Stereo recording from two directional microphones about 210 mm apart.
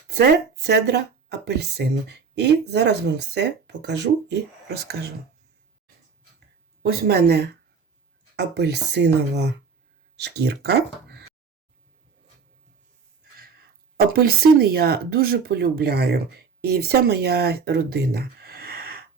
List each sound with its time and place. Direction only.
0.1 s speech: 50° right (ahead or behind)
7.1 s speech: 50° right (ahead or behind)
13.9 s speech: 45° right (ahead or behind)